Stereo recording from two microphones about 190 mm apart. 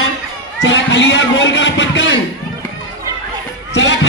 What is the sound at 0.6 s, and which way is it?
Speech, 75° left (ahead or behind).